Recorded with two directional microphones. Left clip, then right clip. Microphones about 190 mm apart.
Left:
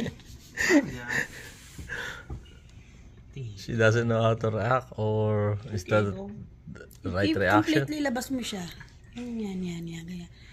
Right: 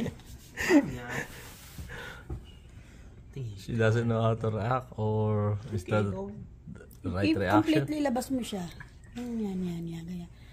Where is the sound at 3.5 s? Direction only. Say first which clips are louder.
Left 5 dB; 10° left (ahead or behind).